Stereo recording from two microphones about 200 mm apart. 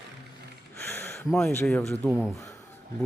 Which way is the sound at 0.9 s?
10° left (ahead or behind).